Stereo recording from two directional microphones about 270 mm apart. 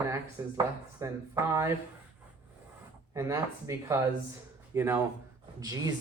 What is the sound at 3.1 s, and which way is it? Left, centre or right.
Speech, centre.